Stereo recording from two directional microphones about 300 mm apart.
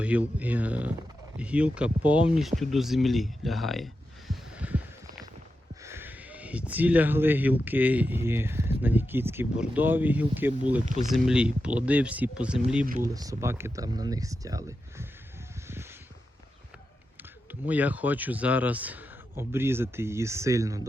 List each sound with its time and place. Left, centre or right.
0.0 s speech: centre
4.3 s heart sounds: centre
5.8 s speech: centre
12.8 s speech: right
13.1 s speech: centre
15.6 s a sound: centre
17.5 s speech: centre